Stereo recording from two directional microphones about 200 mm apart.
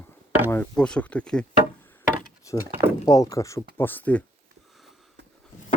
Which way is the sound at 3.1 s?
15° left (ahead or behind).